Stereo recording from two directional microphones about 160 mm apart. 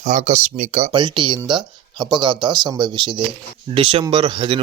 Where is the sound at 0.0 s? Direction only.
50° right (ahead or behind).